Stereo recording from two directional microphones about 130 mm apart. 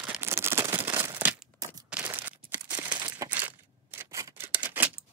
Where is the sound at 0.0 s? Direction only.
15° right (ahead or behind).